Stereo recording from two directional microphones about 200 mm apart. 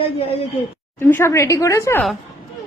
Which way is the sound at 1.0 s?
10° left (ahead or behind).